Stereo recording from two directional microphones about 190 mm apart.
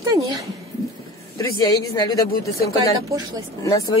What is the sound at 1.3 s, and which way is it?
Speech, 20° left (ahead or behind).